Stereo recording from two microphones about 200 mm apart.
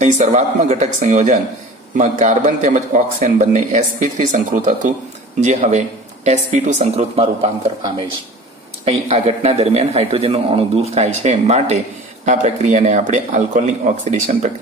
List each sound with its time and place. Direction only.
0.0 s speech: 35° right (ahead or behind)
8.8 s speech: 30° right (ahead or behind)